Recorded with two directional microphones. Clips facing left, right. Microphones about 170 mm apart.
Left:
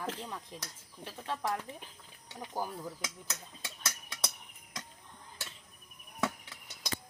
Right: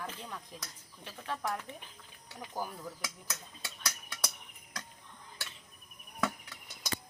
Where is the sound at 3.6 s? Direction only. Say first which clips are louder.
Even; 25° left (ahead or behind).